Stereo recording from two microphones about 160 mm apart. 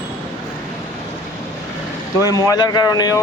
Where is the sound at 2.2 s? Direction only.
20° left (ahead or behind).